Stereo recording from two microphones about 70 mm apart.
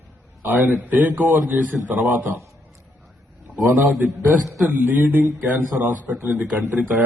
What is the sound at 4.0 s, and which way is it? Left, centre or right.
A man's voice, right.